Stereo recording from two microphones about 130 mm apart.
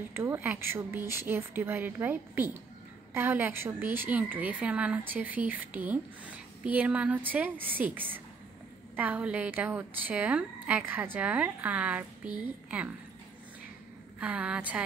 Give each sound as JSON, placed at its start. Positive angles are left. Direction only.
{"t": 0.1, "sound": "a woman's voice", "side_deg": -20}
{"t": 14.2, "sound": "a woman's voice", "side_deg": -10}